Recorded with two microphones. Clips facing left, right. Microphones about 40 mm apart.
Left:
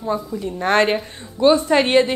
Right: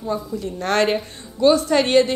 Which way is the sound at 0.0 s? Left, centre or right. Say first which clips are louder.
Left 2 dB; centre.